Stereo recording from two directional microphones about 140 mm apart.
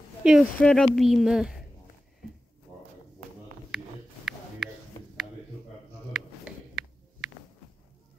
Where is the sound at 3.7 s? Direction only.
5° right (ahead or behind).